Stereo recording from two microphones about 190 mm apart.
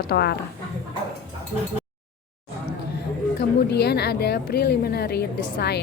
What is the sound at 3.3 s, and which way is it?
A woman's voice, 60° left (ahead or behind).